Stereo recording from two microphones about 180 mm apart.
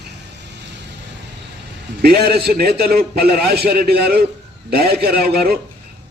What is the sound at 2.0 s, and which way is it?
A man's voice, 60° right (ahead or behind).